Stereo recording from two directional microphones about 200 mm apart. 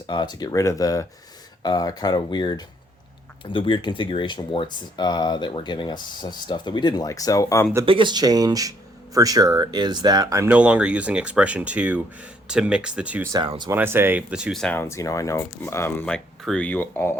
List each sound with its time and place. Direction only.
0.1 s speech: 20° left (ahead or behind)
7.9 s speech: 25° right (ahead or behind); by 13.3 s 5° right (ahead or behind)
13.3 s speech: 20° right (ahead or behind)
13.7 s speech: 10° right (ahead or behind); by 17.2 s 10° left (ahead or behind)